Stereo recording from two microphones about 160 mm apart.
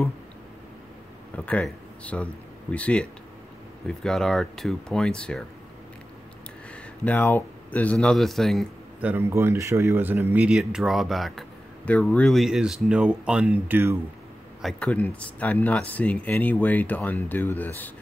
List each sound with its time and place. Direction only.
1.3 s speech: 10° left (ahead or behind)
6.7 s speech: 10° left (ahead or behind)
9.0 s speech: 15° right (ahead or behind)
14.6 s speech: 5° left (ahead or behind)